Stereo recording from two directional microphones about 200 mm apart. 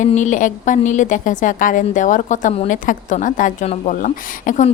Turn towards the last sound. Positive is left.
turn(degrees=40)  # may be behind; listen again after turning